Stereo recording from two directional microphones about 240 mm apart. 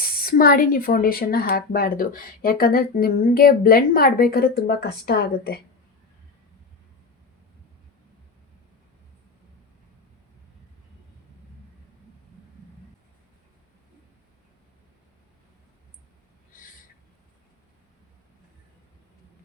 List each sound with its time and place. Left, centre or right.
0.0 s speech: left